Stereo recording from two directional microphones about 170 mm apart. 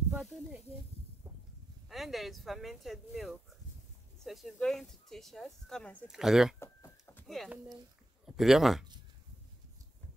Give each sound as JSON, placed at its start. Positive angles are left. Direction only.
{"t": 0.1, "sound": "snake", "side_deg": 0}
{"t": 1.9, "sound": "speech", "side_deg": 0}
{"t": 6.6, "sound": "a sound", "side_deg": 15}
{"t": 7.2, "sound": "speech", "side_deg": 0}